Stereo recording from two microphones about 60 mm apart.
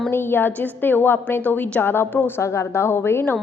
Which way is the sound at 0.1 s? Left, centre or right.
Left.